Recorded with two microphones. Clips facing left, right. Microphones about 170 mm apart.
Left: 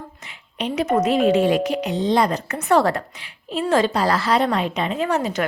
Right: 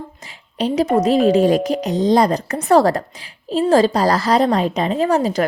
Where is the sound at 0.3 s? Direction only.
35° right (ahead or behind).